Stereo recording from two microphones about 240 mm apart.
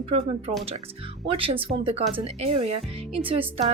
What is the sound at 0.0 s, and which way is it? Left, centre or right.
A woman's voice, right.